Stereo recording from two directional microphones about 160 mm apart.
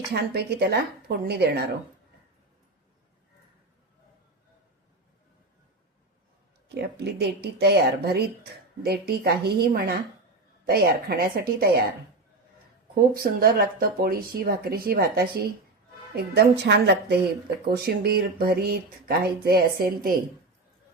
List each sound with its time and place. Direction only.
0.1 s speech: 90° right
6.7 s speech: 90° right; by 11.9 s 75° right (ahead or behind)
13.1 s speech: 70° right (ahead or behind)
16.1 s speech: 90° right
17.7 s speech: 75° right (ahead or behind)